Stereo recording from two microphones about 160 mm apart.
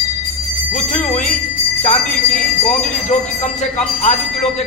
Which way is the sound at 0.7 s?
45° left (ahead or behind).